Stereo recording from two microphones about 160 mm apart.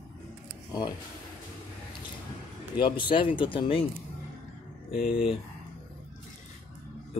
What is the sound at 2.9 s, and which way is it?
Speech, 30° left (ahead or behind).